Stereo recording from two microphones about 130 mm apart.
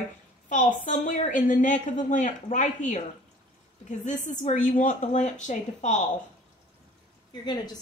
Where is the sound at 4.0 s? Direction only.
70° left (ahead or behind).